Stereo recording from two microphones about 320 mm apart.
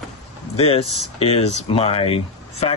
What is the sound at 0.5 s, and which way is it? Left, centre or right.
Speech, centre.